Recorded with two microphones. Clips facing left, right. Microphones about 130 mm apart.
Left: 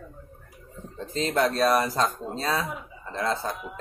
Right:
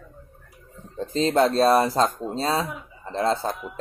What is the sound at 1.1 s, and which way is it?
Speech, 30° right (ahead or behind).